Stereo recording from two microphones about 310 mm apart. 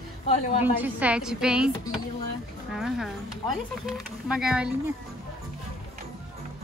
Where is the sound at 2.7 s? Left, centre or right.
Centre.